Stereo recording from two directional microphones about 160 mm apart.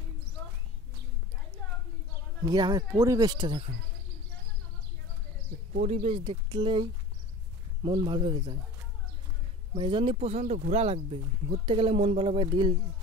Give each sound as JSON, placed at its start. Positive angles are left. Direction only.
{"t": 2.4, "sound": "speech", "side_deg": -25}
{"t": 5.7, "sound": "speech", "side_deg": -45}
{"t": 9.8, "sound": "speech", "side_deg": -35}